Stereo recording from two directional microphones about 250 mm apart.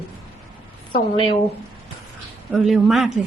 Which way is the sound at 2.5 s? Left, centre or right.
Centre.